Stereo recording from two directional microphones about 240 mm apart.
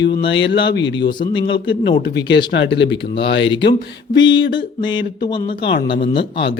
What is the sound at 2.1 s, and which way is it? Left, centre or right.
Speech, left.